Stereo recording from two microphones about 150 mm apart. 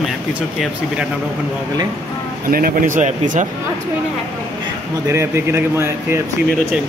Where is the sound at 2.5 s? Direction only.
70° right (ahead or behind).